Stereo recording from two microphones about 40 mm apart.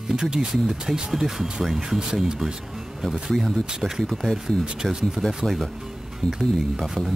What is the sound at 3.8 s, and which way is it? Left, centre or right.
Speech, centre.